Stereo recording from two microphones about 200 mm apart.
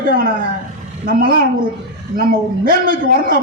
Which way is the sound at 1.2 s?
45° right (ahead or behind).